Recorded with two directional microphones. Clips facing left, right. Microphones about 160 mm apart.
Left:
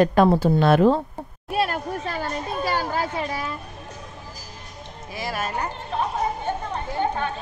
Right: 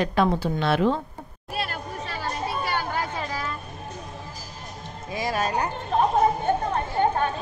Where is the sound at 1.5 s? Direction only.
50° left (ahead or behind).